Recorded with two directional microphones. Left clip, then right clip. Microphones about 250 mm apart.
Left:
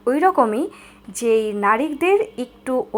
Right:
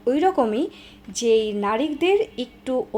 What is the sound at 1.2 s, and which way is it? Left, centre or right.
Speech, left.